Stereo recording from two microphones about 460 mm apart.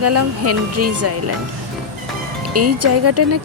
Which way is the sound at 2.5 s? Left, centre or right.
Right.